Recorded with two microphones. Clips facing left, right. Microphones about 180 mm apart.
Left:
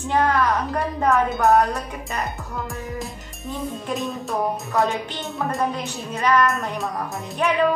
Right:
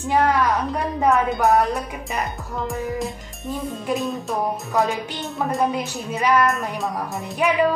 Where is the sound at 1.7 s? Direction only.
15° right (ahead or behind).